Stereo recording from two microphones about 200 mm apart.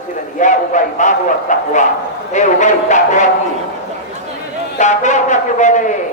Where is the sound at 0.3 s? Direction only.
40° left (ahead or behind).